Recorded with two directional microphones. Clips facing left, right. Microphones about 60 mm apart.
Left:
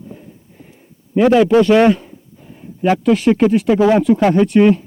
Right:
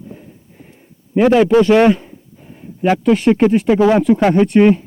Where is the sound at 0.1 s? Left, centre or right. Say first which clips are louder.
Even; centre.